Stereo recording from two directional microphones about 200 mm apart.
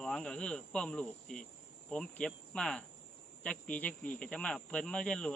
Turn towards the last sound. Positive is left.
turn(degrees=5)  # may be behind; listen again after turning